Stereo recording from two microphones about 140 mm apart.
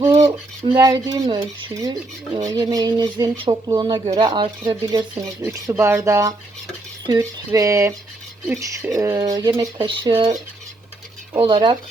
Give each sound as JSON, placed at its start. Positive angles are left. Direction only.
{"t": 0.0, "sound": "speech", "side_deg": -25}
{"t": 1.7, "sound": "speech", "side_deg": -25}
{"t": 4.0, "sound": "speech", "side_deg": -50}
{"t": 4.3, "sound": "speech", "side_deg": -35}
{"t": 5.4, "sound": "speech", "side_deg": -25}
{"t": 11.4, "sound": "speech", "side_deg": -35}